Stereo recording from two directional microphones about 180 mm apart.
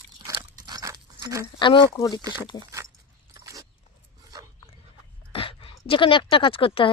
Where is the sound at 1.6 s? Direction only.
25° left (ahead or behind).